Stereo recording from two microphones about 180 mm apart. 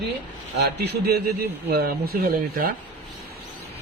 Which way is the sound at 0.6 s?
65° right (ahead or behind).